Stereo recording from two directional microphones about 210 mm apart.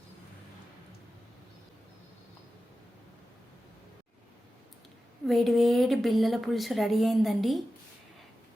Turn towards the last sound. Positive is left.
turn(degrees=0)  # may be behind; listen again after turning